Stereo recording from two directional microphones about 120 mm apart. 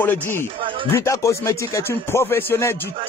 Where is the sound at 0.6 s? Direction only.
45° right (ahead or behind).